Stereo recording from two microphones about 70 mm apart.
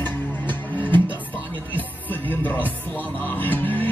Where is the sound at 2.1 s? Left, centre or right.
Left.